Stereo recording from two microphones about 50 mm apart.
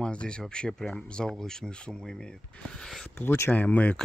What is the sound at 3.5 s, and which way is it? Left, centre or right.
Speech, left.